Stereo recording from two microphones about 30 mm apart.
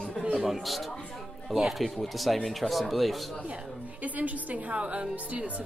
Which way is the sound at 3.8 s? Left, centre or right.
Right.